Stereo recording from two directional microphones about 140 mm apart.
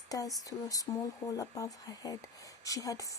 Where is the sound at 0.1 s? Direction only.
25° left (ahead or behind).